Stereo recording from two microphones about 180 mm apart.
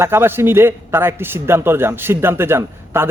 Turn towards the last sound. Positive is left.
turn(degrees=-15)  # may be behind; listen again after turning